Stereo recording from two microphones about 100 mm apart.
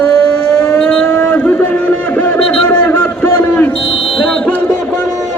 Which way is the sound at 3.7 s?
65° left (ahead or behind).